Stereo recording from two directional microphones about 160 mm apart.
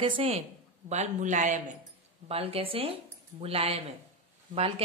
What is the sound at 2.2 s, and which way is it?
Speech, 35° right (ahead or behind).